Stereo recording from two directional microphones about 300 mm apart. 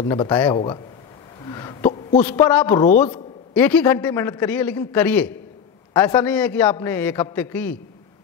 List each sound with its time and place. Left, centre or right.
0.0 s a man's voice: centre
1.4 s wail: centre
2.2 s a man's voice: centre